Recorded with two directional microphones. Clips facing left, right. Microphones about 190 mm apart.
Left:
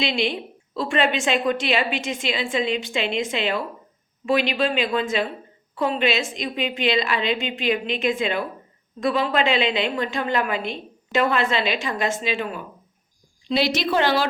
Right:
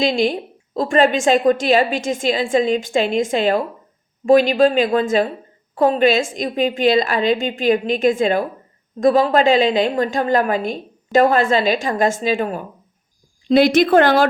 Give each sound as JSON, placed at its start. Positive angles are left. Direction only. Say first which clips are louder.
{"t": 0.0, "sound": "a woman's voice", "louder": "right 6 dB", "side_deg": -45}